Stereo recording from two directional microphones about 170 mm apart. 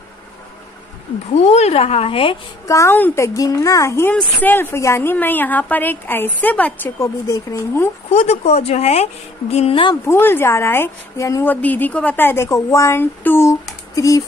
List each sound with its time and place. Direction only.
1.3 s a woman's voice: 40° left (ahead or behind)
2.6 s a woman's voice: 20° left (ahead or behind)
8.1 s a woman's voice: 40° left (ahead or behind)
10.0 s a woman's voice: 15° left (ahead or behind)